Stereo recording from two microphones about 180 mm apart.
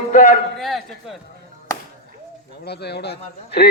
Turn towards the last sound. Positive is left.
turn(degrees=65)  # may be behind; listen again after turning